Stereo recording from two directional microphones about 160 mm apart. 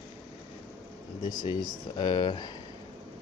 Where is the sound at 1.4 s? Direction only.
30° left (ahead or behind).